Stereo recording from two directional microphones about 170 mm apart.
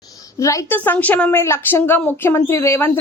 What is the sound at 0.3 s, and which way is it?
A woman's voice, 20° left (ahead or behind).